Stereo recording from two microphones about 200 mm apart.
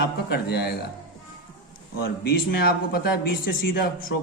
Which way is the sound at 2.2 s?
50° left (ahead or behind).